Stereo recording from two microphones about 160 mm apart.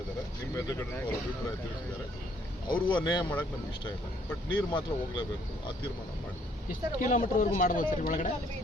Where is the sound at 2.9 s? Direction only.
25° left (ahead or behind).